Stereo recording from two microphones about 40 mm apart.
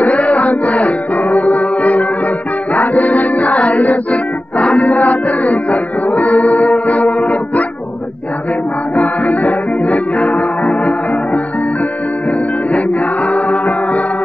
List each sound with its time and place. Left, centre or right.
0.0 s music: left
8.9 s music: left
12.7 s chant: left